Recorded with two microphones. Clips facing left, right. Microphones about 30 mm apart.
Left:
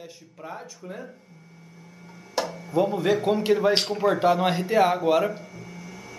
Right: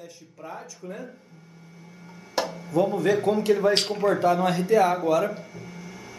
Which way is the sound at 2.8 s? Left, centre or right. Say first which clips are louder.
Even; centre.